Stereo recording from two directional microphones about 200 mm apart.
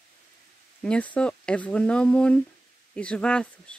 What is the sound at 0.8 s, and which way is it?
Speech, 5° left (ahead or behind).